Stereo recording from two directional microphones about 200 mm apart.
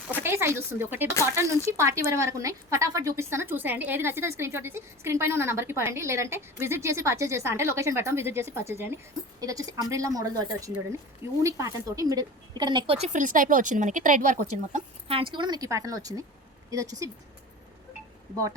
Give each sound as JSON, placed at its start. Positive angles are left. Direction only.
{"t": 0.2, "sound": "a woman's voice", "side_deg": -10}
{"t": 13.1, "sound": "a woman's voice", "side_deg": -40}